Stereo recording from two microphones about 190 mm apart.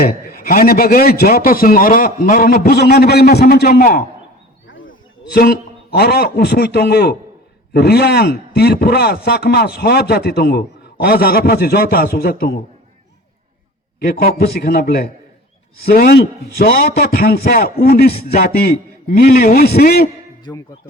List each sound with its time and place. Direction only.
0.0 s a man's voice: 50° left (ahead or behind)
5.3 s a man's voice: 55° left (ahead or behind)
14.0 s a man's voice: 50° left (ahead or behind)
20.5 s speech: 20° left (ahead or behind)